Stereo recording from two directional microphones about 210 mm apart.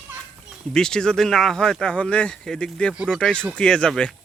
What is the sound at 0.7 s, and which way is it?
Speech, 5° left (ahead or behind).